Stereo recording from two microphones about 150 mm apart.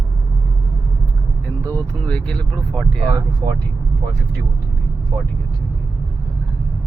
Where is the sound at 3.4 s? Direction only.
25° right (ahead or behind).